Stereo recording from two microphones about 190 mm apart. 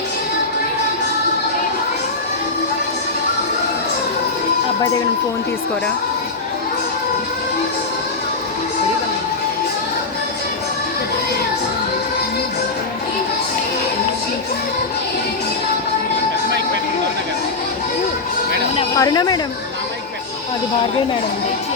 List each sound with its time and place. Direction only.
18.8 s a woman's voice: 20° left (ahead or behind)